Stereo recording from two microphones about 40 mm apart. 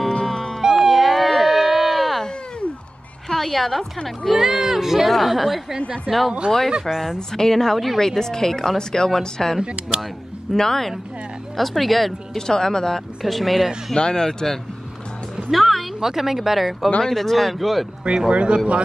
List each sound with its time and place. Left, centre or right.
0.1 s music: centre
0.6 s a sound: centre
3.3 s a woman's voice: centre
4.3 s speech: centre
7.2 s speech: centre
9.6 s speech: right
10.5 s speech: centre
12.4 s speech: centre
13.2 s speech: centre
13.9 s speech: centre
16.0 s speech: centre
18.3 s speech: right